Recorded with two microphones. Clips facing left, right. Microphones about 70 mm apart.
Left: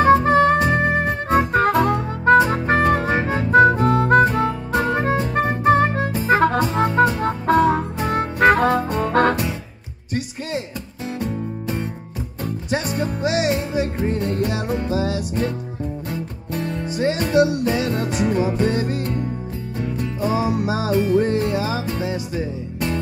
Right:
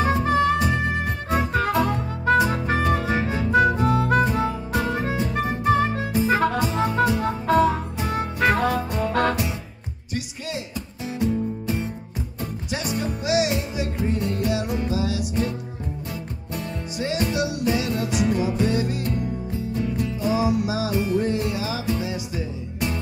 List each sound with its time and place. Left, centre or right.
0.0 s music: left
11.1 s music: left
16.6 s music: left